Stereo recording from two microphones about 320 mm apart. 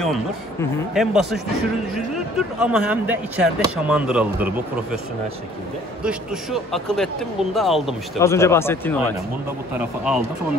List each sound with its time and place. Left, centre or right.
0.0 s speech: centre
6.0 s speech: centre